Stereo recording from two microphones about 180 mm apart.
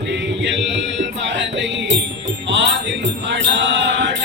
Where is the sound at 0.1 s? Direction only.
80° right.